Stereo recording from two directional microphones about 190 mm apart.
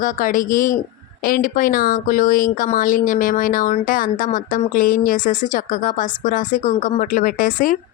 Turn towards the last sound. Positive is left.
turn(degrees=45)  # may be behind; listen again after turning